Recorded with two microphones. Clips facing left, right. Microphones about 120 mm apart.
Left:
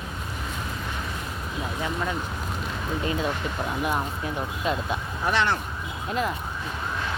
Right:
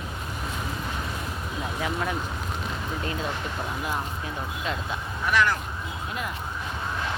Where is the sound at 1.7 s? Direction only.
5° right (ahead or behind).